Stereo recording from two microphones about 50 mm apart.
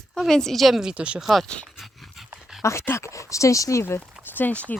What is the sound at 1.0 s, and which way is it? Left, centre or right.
Speech, right.